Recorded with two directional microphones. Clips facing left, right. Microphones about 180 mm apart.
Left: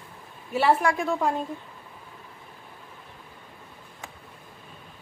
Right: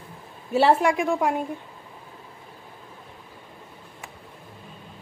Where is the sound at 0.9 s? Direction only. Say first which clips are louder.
Right 2 dB; 10° right (ahead or behind).